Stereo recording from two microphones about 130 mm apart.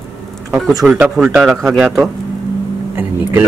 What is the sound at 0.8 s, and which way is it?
Speech, 5° right (ahead or behind).